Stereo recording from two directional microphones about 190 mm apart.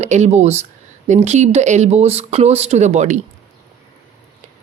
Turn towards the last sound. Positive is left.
turn(degrees=-40)  # may be behind; listen again after turning